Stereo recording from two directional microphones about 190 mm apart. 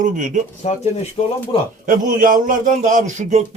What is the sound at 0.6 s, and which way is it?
Speech, 35° left (ahead or behind).